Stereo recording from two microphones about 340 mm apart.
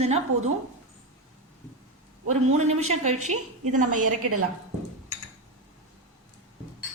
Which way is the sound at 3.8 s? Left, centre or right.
Right.